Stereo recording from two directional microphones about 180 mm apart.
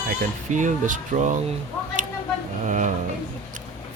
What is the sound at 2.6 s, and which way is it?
Speech, 45° right (ahead or behind).